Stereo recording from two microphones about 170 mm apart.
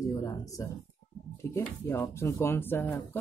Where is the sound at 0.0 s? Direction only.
20° left (ahead or behind).